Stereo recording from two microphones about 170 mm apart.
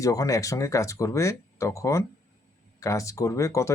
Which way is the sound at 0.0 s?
20° left (ahead or behind).